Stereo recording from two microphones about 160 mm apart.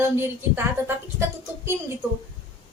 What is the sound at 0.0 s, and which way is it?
Speech, 15° right (ahead or behind).